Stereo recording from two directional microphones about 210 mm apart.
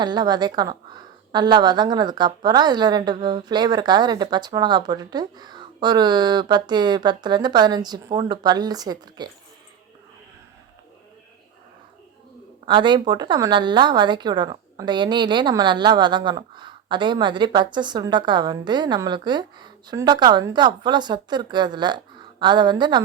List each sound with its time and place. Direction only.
0.0 s a woman's voice: 20° right (ahead or behind)
12.6 s a woman's voice: 20° right (ahead or behind)